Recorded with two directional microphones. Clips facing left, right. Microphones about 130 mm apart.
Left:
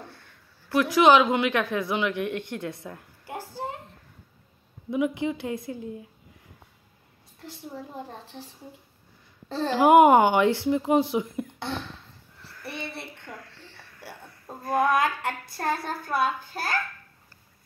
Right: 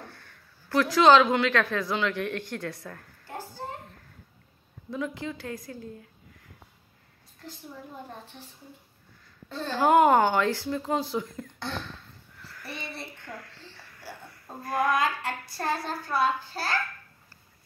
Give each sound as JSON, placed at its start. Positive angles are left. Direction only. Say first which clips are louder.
{"t": 0.0, "sound": "a woman's voice", "louder": "left 1 dB", "side_deg": 20}
{"t": 4.9, "sound": "a woman's voice", "louder": "left 7 dB", "side_deg": 15}
{"t": 9.8, "sound": "speech", "louder": "left 4 dB", "side_deg": 15}
{"t": 12.4, "sound": "a sound", "louder": "left 2 dB", "side_deg": 20}
{"t": 14.6, "sound": "a woman's voice", "louder": "left 3 dB", "side_deg": 20}
{"t": 15.0, "sound": "speech", "louder": "left 2 dB", "side_deg": 55}